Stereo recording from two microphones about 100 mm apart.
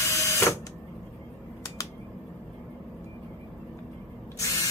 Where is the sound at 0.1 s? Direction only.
30° left (ahead or behind).